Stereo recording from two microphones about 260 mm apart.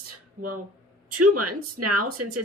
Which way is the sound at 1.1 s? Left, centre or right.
Right.